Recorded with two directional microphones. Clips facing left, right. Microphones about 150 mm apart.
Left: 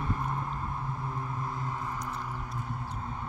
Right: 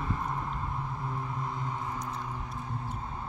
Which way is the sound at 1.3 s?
20° right (ahead or behind).